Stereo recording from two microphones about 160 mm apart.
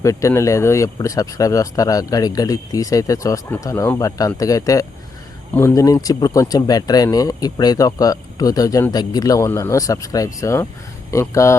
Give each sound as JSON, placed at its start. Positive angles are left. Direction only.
{"t": 0.0, "sound": "speech", "side_deg": 20}